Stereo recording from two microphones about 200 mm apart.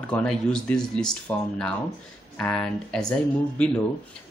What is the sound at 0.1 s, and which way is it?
Speech, 5° left (ahead or behind).